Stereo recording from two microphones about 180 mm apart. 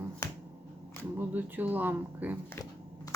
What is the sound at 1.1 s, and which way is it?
Speech, 10° right (ahead or behind).